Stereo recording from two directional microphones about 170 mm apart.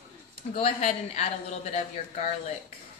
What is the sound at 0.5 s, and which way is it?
A woman's voice, 40° left (ahead or behind).